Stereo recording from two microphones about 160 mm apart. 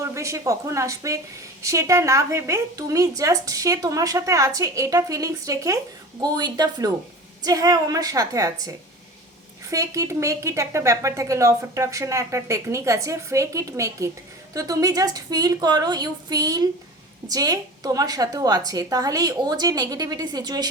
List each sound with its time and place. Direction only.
0.0 s speech: 20° right (ahead or behind)